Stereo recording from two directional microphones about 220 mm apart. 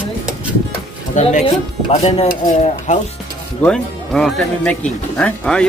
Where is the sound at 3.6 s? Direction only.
5° left (ahead or behind).